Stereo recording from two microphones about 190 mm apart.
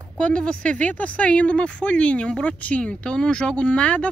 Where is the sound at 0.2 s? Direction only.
5° left (ahead or behind).